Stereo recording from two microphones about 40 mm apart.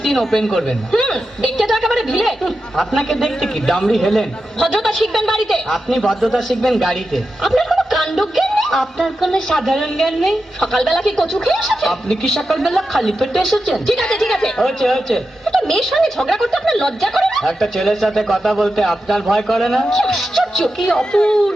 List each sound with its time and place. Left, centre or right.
0.1 s speech: centre
0.9 s a sound: centre
1.5 s a woman's voice: centre
10.1 s a woman's voice: centre; by 21.3 s left